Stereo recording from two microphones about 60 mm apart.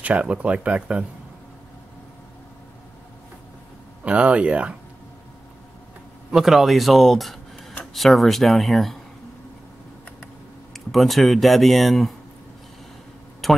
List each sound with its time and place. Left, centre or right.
0.0 s speech: right
4.0 s speech: right
6.3 s speech: centre
10.2 s speech: centre
13.4 s speech: centre